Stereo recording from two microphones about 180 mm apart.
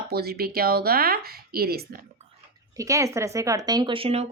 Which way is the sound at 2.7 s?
20° right (ahead or behind).